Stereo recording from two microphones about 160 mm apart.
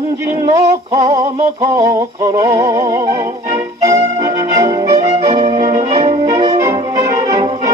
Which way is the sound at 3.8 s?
20° right (ahead or behind).